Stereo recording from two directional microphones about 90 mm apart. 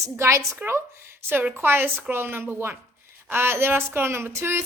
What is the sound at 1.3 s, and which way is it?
A woman's voice, 20° right (ahead or behind).